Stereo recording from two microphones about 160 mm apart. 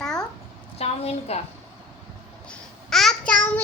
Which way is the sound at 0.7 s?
40° left (ahead or behind).